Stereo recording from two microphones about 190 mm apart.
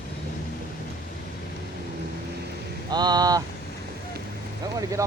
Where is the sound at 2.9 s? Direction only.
20° right (ahead or behind).